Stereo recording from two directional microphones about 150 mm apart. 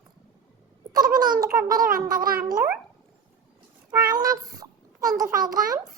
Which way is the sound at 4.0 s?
25° right (ahead or behind).